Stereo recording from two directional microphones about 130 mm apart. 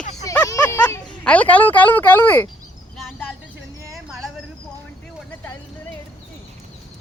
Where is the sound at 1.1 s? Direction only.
10° left (ahead or behind).